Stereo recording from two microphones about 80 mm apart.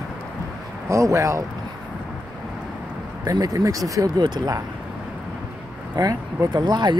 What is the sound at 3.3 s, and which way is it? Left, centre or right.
Speech, right.